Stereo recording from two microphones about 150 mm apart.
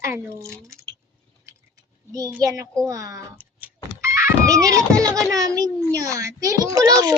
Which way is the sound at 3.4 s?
10° right (ahead or behind).